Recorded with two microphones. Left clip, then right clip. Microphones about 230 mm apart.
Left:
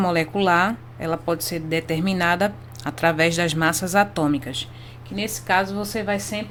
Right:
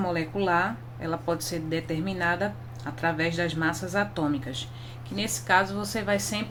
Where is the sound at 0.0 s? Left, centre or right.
Left.